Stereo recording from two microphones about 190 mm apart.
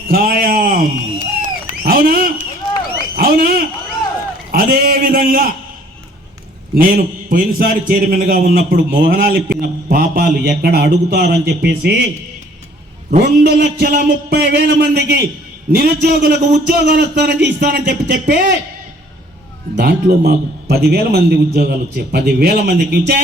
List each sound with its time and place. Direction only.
0.1 s a sound: 50° right (ahead or behind)
4.5 s a man's voice: 50° right (ahead or behind)
6.7 s a man's voice: 50° right (ahead or behind)
13.1 s a man's voice: 55° right (ahead or behind)
19.7 s a man's voice: 55° right (ahead or behind)